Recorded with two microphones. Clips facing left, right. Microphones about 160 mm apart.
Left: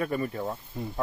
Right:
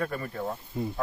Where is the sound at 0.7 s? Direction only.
5° right (ahead or behind).